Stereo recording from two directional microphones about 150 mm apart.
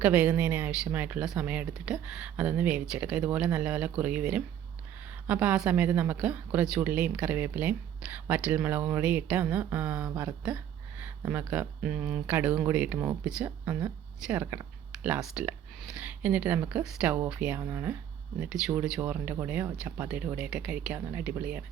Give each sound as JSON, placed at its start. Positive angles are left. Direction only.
{"t": 0.0, "sound": "a woman's voice", "side_deg": -10}